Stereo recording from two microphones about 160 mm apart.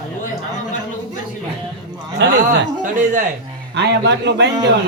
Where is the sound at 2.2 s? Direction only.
90° right.